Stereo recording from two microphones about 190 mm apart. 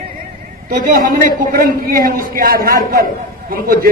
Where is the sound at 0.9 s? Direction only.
45° right (ahead or behind).